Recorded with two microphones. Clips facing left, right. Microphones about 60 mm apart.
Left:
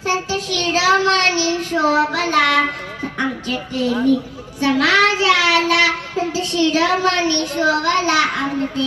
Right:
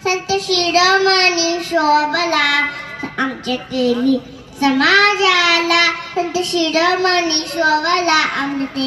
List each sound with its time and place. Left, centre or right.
0.0 s a child's voice: right
2.0 s child singing: right
3.2 s a woman's voice: right
4.6 s child singing: right